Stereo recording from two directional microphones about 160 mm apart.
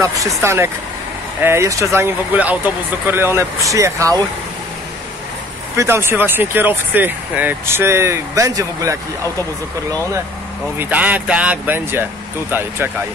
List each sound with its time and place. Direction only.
0.0 s speech: 20° right (ahead or behind)
5.8 s speech: 15° right (ahead or behind)
10.8 s speech: 10° right (ahead or behind)